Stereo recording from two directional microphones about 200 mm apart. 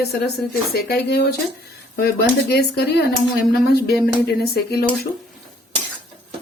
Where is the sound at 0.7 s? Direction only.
55° left (ahead or behind).